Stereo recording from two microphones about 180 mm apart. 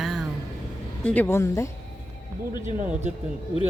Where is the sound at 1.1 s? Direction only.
10° left (ahead or behind).